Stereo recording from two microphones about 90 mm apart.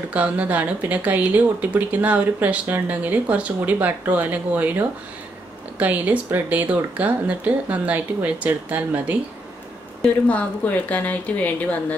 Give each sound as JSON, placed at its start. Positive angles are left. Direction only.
{"t": 0.1, "sound": "speech", "side_deg": -15}
{"t": 10.2, "sound": "a woman's voice", "side_deg": 15}